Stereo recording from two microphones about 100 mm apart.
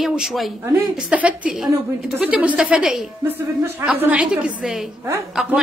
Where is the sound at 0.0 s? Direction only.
5° right (ahead or behind).